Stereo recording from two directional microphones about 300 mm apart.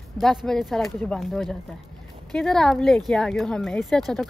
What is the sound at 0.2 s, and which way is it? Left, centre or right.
Speech, centre.